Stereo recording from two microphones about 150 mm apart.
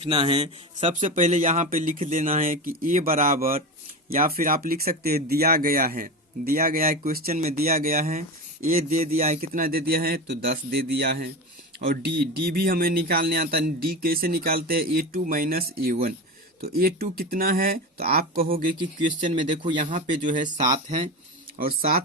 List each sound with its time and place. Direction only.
0.0 s a man's voice: 35° right (ahead or behind)
0.8 s speech: 50° right (ahead or behind); by 18.6 s 75° right (ahead or behind)
19.8 s speech: 60° right (ahead or behind)
21.6 s speech: 75° right (ahead or behind)